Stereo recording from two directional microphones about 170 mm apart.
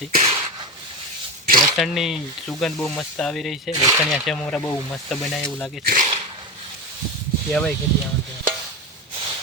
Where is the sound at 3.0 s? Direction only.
5° left (ahead or behind).